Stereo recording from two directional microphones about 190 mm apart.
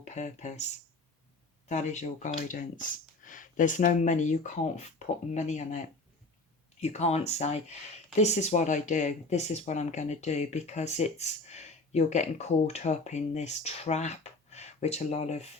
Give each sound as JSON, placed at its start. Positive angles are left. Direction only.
{"t": 0.0, "sound": "speech", "side_deg": 35}